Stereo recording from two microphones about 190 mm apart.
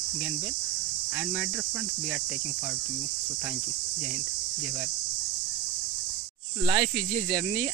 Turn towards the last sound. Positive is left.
turn(degrees=-20)  # may be behind; listen again after turning